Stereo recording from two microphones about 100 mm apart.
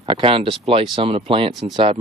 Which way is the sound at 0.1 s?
65° right (ahead or behind).